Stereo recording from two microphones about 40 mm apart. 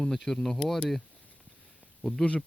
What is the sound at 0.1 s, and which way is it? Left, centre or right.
Speech, centre.